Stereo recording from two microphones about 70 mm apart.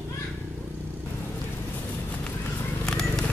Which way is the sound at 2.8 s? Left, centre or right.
Centre.